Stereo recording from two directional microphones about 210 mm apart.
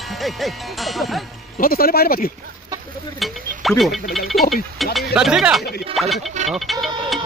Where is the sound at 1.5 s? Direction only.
45° left (ahead or behind).